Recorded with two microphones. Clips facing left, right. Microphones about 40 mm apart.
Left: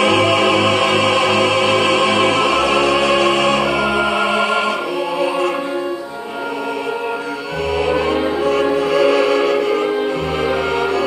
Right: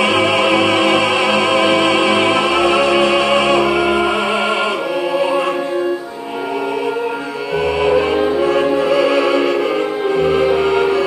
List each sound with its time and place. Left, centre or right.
0.0 s music: centre
7.8 s music: centre